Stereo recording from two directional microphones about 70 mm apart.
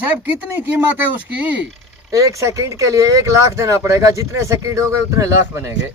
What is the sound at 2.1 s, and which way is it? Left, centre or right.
Speech, right.